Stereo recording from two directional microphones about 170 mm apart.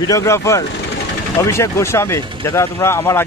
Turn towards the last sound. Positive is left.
turn(degrees=15)  # may be behind; listen again after turning